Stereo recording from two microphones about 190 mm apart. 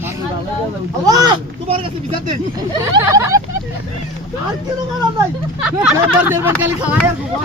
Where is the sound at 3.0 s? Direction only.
15° right (ahead or behind).